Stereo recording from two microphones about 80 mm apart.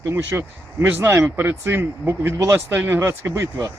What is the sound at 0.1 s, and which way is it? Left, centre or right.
Speech, right.